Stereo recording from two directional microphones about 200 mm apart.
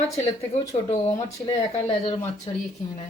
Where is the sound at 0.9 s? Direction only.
35° left (ahead or behind).